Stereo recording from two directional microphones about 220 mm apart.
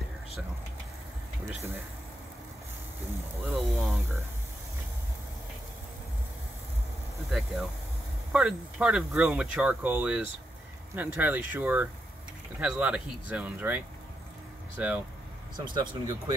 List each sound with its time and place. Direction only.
1.5 s speech: 10° right (ahead or behind)
3.4 s speech: centre (ahead or behind)
7.2 s speech: centre (ahead or behind)
15.5 s speech: 20° right (ahead or behind)